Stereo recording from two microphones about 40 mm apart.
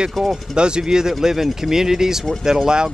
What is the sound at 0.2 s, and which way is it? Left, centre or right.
Speech, centre.